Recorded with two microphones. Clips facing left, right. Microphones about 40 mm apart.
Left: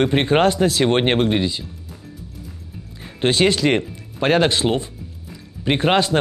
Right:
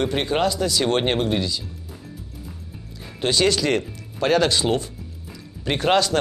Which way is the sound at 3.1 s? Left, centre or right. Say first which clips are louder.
Left 3 dB; left.